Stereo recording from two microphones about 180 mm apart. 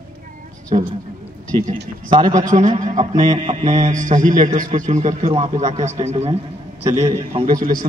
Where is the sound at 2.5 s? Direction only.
45° right (ahead or behind).